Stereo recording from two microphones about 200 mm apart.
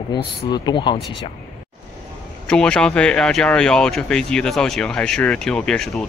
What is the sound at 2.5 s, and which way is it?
Speech, 5° left (ahead or behind).